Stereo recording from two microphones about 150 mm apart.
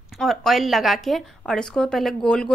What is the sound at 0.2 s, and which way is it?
A woman's voice, centre (ahead or behind).